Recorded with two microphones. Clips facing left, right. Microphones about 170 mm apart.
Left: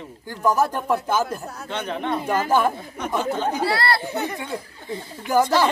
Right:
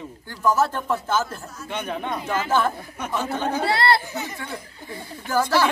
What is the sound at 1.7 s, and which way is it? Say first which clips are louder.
Speech: even; 10° right (ahead or behind).